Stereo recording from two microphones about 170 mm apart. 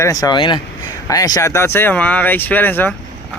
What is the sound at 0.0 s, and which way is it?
Speech, 20° left (ahead or behind).